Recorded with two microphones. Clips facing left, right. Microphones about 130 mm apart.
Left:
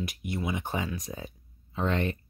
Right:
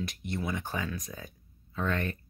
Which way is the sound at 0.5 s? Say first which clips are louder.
Left 2 dB; 20° left (ahead or behind).